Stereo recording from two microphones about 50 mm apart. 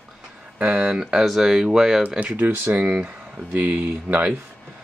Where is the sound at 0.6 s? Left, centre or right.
Right.